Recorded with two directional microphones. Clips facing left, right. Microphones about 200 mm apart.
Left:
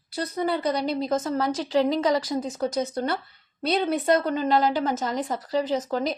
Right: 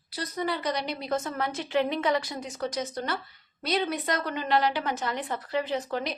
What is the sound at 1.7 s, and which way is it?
A woman's voice, 35° left (ahead or behind).